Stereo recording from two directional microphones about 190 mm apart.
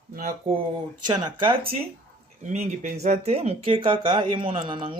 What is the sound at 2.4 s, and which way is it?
Speech, 35° right (ahead or behind).